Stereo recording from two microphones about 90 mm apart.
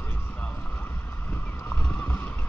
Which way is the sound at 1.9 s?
20° left (ahead or behind).